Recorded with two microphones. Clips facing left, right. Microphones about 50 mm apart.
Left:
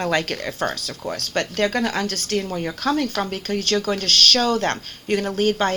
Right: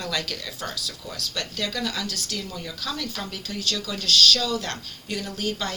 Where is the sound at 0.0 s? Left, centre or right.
Left.